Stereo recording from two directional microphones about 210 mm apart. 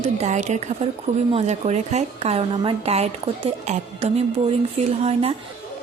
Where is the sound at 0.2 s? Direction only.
35° right (ahead or behind).